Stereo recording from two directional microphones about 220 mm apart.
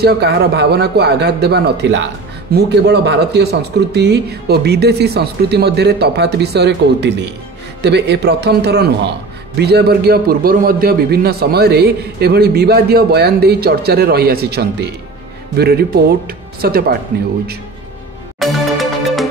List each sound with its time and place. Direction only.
0.0 s a man's voice: 50° right (ahead or behind)
18.4 s music: centre (ahead or behind)